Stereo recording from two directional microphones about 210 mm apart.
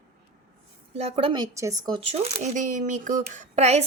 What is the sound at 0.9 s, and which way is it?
Speech, 30° right (ahead or behind).